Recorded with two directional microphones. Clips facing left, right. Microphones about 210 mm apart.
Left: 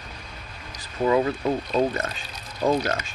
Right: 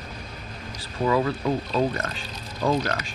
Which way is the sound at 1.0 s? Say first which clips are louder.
Left 2 dB; 20° left (ahead or behind).